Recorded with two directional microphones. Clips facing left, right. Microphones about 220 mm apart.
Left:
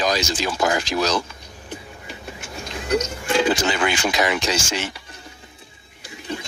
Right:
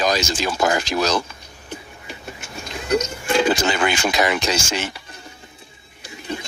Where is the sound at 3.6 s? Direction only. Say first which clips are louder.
Right 1 dB; 50° right (ahead or behind).